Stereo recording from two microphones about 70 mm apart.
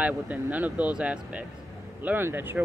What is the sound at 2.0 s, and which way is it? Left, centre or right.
Speech, right.